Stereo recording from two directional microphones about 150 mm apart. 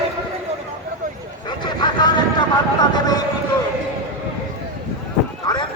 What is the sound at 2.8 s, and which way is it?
Vehicle, 25° left (ahead or behind).